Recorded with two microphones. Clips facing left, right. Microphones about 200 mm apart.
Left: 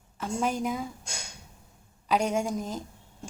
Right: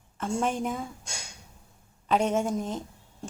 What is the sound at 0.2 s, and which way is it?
Speech, centre (ahead or behind).